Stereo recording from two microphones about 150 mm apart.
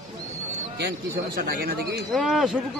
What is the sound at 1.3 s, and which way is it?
Speech, 80° right.